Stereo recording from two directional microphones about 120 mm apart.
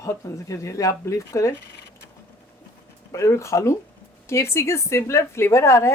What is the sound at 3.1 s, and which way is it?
A woman's voice, 25° left (ahead or behind).